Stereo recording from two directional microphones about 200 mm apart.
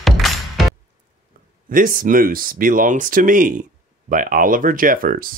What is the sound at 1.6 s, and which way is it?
Speech, 45° right (ahead or behind).